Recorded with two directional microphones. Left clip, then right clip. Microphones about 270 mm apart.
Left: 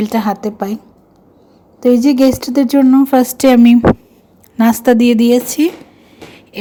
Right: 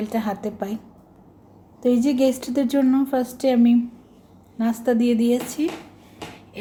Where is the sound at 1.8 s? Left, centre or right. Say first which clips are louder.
Left 9 dB; left.